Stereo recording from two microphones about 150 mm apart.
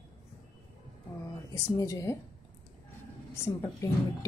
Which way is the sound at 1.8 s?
20° left (ahead or behind).